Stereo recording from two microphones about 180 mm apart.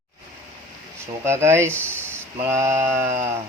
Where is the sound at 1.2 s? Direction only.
15° right (ahead or behind).